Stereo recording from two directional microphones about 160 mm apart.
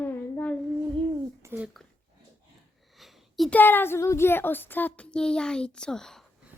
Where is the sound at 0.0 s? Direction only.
10° left (ahead or behind).